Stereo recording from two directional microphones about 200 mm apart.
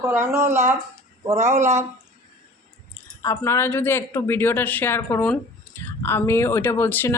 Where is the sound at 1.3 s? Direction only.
35° right (ahead or behind).